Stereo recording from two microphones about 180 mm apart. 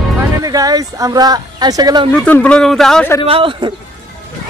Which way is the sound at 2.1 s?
5° left (ahead or behind).